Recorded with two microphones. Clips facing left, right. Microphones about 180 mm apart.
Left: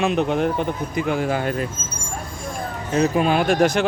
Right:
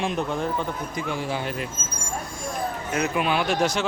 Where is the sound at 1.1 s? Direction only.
55° left (ahead or behind).